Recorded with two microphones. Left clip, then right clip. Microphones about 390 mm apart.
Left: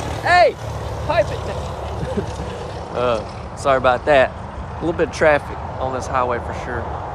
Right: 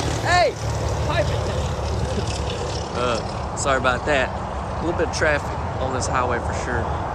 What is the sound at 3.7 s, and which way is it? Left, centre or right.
Speech, centre.